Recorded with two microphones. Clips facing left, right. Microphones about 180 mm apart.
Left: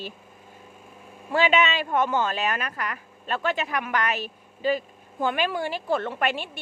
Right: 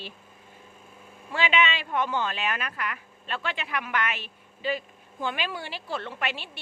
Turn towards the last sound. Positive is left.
turn(degrees=50)  # may be behind; listen again after turning